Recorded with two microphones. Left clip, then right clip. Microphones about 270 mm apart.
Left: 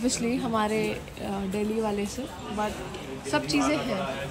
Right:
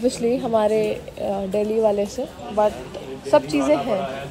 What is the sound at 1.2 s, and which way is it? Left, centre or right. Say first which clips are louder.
Speech: right 11 dB; centre.